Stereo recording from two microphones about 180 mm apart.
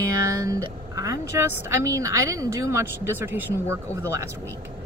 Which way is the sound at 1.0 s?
15° right (ahead or behind).